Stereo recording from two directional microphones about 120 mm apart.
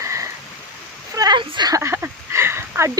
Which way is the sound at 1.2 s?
40° right (ahead or behind).